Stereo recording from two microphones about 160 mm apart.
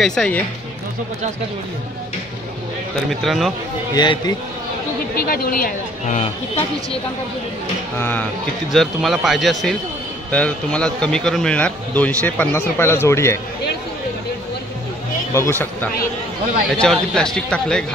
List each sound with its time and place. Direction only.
0.0 s a man's voice: 5° left (ahead or behind)
3.1 s a man's voice: centre (ahead or behind)
3.9 s a man's voice: 25° left (ahead or behind)
5.1 s speech: 65° left (ahead or behind); by 7.0 s 45° left (ahead or behind)
8.0 s a man's voice: 10° left (ahead or behind)
8.7 s a man's voice: centre (ahead or behind); by 13.4 s 15° left (ahead or behind)
15.3 s a man's voice: 15° left (ahead or behind)